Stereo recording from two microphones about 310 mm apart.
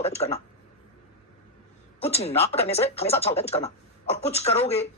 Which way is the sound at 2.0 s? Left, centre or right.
Centre.